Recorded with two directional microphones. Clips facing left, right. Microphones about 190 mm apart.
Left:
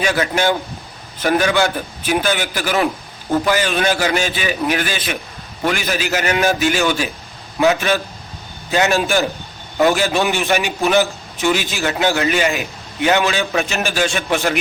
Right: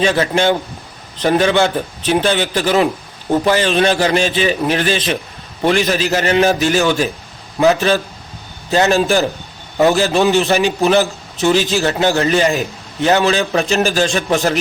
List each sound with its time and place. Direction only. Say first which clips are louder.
0.2 s a man's voice: right 3 dB; 25° right (ahead or behind)